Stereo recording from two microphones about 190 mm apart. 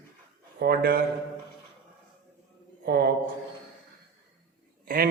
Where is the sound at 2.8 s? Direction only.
55° right (ahead or behind).